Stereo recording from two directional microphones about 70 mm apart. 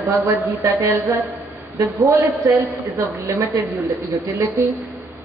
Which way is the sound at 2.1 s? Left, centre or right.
Right.